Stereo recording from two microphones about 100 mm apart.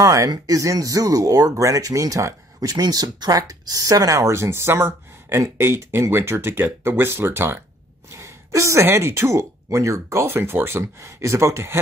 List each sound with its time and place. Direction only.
0.0 s speech: 35° right (ahead or behind)